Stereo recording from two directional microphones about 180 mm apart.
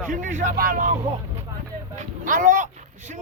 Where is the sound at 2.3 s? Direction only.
45° right (ahead or behind).